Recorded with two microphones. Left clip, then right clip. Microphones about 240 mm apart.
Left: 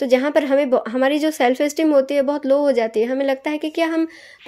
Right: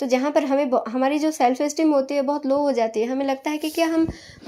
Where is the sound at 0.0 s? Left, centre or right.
Left.